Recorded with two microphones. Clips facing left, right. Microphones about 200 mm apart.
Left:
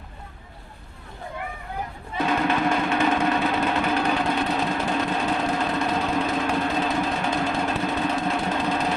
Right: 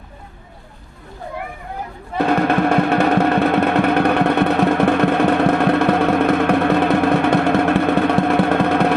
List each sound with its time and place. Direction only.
2.1 s music: 60° right (ahead or behind)